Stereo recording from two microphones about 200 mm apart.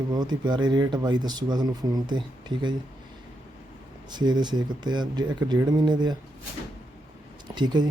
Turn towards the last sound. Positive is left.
turn(degrees=-20)  # may be behind; listen again after turning